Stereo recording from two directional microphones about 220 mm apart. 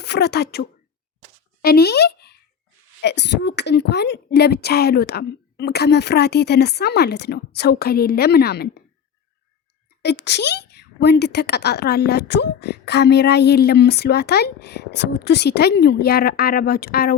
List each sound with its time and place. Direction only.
0.0 s speech: 50° left (ahead or behind)
1.6 s a child's voice: 45° left (ahead or behind)
10.0 s a child's voice: 50° left (ahead or behind)